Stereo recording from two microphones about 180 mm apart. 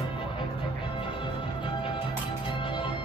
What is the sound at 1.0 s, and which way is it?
Music, 30° left (ahead or behind).